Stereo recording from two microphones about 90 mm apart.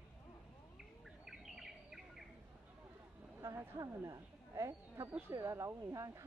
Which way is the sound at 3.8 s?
40° right (ahead or behind).